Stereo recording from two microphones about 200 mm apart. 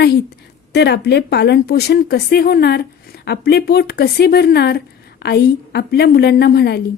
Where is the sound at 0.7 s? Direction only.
55° left (ahead or behind).